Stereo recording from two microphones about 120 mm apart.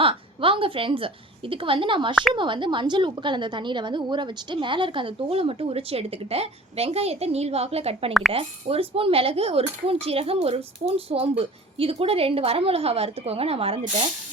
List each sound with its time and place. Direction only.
0.0 s a woman's voice: 50° right (ahead or behind)